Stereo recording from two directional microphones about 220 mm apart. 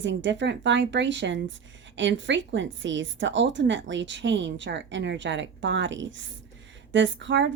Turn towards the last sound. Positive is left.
turn(degrees=-55)  # may be behind; listen again after turning